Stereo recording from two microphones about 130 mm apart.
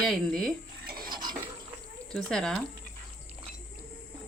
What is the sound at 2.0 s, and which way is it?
Speech, 5° left (ahead or behind).